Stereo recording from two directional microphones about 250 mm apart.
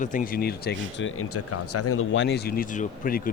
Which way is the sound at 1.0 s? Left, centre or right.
Left.